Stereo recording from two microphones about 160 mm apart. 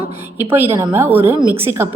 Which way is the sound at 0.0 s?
35° right (ahead or behind).